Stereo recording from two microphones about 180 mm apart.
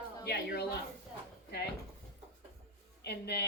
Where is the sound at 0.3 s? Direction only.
65° left (ahead or behind).